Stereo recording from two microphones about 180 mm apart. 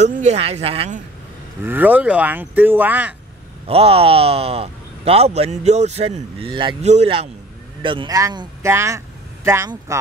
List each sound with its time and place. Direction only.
0.1 s speech: 40° right (ahead or behind)
1.6 s speech: 10° right (ahead or behind)
3.6 s speech: 35° right (ahead or behind); by 9.9 s 15° right (ahead or behind)